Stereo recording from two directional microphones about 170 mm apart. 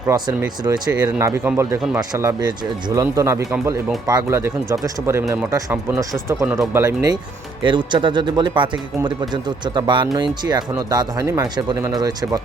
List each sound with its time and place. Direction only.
0.1 s speech: 25° right (ahead or behind)